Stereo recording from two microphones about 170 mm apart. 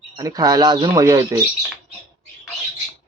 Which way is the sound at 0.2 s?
20° right (ahead or behind).